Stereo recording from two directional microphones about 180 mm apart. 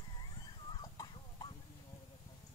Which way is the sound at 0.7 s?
25° left (ahead or behind).